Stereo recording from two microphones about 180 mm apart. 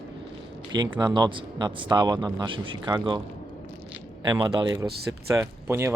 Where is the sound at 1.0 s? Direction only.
25° right (ahead or behind).